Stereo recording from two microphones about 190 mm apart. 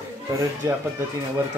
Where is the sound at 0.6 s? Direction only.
15° right (ahead or behind).